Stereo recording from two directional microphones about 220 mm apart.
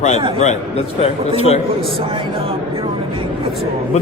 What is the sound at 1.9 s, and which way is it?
Speech, 25° right (ahead or behind).